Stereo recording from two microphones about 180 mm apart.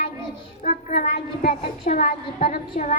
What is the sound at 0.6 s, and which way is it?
A woman's voice, 45° left (ahead or behind).